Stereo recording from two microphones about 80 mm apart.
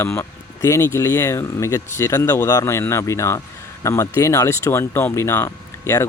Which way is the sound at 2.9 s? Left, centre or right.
Left.